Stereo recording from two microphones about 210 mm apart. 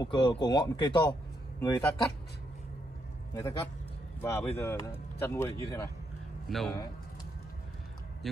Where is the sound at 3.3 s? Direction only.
15° left (ahead or behind).